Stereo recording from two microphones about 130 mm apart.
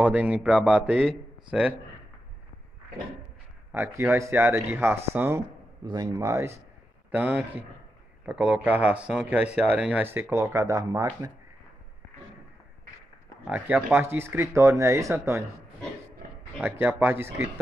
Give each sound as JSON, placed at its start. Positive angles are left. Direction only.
{"t": 0.0, "sound": "a man's voice", "side_deg": -10}
{"t": 3.7, "sound": "speech", "side_deg": -20}
{"t": 5.9, "sound": "speech", "side_deg": -30}
{"t": 7.1, "sound": "speech", "side_deg": -15}
{"t": 13.5, "sound": "speech", "side_deg": -10}
{"t": 16.6, "sound": "speech", "side_deg": -15}